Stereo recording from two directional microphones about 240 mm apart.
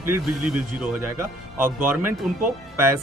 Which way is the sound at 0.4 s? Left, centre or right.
Centre.